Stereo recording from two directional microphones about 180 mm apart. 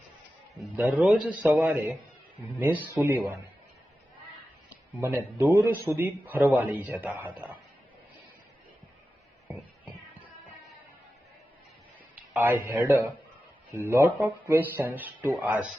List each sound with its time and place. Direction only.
0.6 s a man's voice: 5° right (ahead or behind)
4.9 s a man's voice: 10° right (ahead or behind)
12.4 s a man's voice: 10° right (ahead or behind)